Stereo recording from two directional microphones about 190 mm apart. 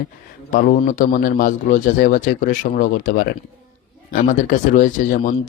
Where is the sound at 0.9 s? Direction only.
45° left (ahead or behind).